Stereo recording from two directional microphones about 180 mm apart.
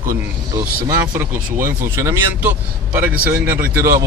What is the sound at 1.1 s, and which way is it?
A man's voice, 15° right (ahead or behind).